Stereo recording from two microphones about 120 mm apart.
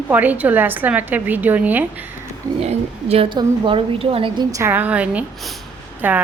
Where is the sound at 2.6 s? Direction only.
60° right (ahead or behind).